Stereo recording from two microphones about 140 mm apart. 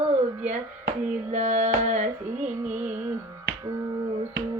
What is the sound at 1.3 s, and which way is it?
Music, 50° right (ahead or behind).